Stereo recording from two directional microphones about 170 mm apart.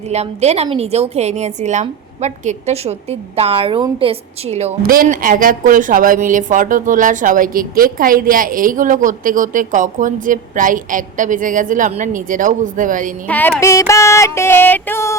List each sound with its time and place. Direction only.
0.1 s a woman's voice: 40° right (ahead or behind)
4.8 s a woman's voice: 55° right (ahead or behind)
13.2 s music: 10° left (ahead or behind)